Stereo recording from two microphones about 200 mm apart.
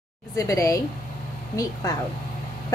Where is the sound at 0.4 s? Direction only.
15° left (ahead or behind).